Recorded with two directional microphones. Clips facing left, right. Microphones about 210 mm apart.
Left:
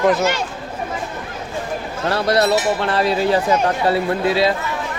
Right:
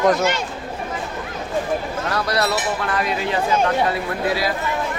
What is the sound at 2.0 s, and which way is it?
A man's voice, 30° left (ahead or behind).